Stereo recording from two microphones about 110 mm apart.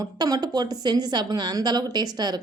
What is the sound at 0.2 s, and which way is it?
A woman's voice, 35° right (ahead or behind).